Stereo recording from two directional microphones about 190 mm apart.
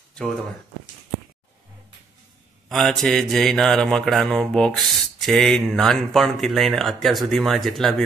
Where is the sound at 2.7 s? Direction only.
Centre (ahead or behind).